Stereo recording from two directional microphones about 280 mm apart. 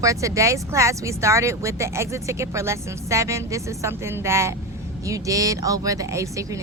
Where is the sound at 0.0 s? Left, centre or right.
Centre.